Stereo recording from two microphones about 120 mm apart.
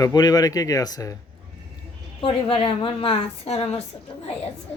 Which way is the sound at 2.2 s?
50° left (ahead or behind).